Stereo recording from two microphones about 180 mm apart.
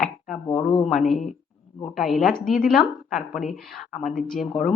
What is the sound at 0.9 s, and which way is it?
Speech, centre (ahead or behind).